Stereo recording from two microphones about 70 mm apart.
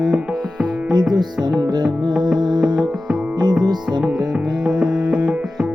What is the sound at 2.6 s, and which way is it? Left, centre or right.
Music, centre.